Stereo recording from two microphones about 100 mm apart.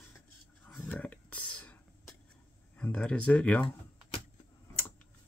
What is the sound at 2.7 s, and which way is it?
Speech, 10° left (ahead or behind).